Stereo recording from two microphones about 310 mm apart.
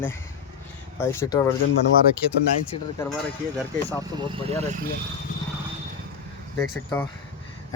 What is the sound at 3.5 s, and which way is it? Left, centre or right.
Speech, centre.